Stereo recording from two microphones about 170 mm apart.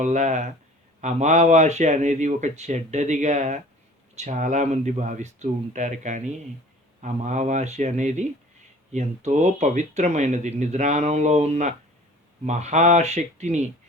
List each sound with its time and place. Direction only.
0.0 s speech: 45° right (ahead or behind)